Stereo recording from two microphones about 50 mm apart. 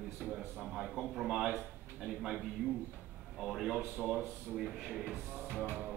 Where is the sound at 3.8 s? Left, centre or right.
Right.